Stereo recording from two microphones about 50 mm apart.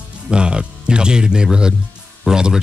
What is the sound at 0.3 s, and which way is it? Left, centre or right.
Speech, centre.